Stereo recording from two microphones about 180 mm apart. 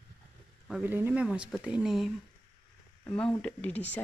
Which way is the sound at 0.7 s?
10° right (ahead or behind).